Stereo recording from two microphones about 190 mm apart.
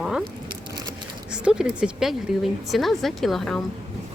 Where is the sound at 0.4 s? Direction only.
20° right (ahead or behind).